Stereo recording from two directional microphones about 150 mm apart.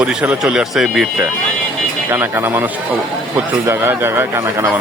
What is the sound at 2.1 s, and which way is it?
A man's voice, 15° right (ahead or behind).